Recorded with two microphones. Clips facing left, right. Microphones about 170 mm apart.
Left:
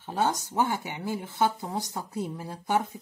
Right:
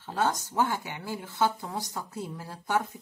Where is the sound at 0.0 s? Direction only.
15° left (ahead or behind).